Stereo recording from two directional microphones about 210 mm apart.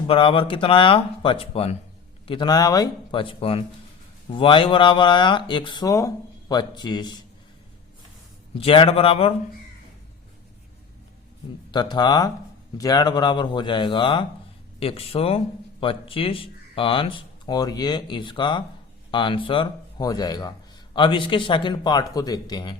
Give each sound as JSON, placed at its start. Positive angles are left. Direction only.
{"t": 0.1, "sound": "speech", "side_deg": 25}
{"t": 8.6, "sound": "speech", "side_deg": 25}
{"t": 11.7, "sound": "speech", "side_deg": 20}